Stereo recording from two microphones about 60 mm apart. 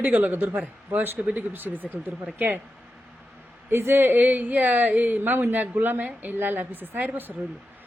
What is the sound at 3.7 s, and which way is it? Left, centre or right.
A woman's voice, right.